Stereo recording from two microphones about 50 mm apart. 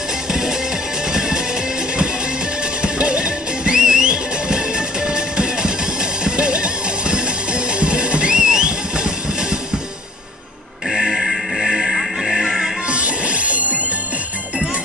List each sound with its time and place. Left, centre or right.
0.3 s music: centre
2.8 s music: centre
10.9 s music: centre
12.8 s music: right